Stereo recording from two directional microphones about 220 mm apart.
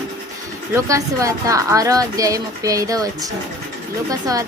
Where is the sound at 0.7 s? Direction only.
15° right (ahead or behind).